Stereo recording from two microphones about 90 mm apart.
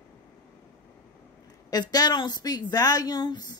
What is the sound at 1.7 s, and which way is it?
Speech, 45° left (ahead or behind).